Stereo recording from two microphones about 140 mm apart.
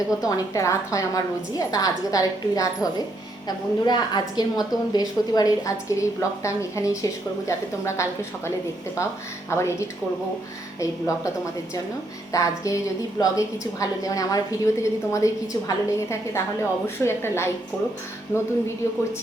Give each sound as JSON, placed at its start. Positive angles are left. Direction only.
{"t": 0.2, "sound": "a woman's voice", "side_deg": 25}
{"t": 9.5, "sound": "a woman's voice", "side_deg": 20}
{"t": 12.3, "sound": "a woman's voice", "side_deg": 25}